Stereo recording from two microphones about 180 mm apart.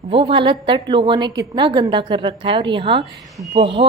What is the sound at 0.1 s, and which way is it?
A woman's voice, 30° right (ahead or behind).